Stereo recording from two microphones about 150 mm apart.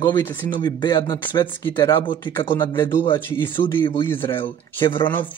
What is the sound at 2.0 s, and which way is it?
Speech, 35° left (ahead or behind).